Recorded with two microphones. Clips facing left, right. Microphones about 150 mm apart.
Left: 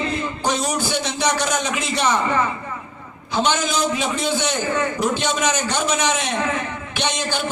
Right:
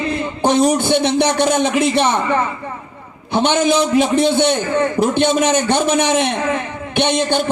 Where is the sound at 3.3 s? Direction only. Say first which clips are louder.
Right 6 dB; 60° right (ahead or behind).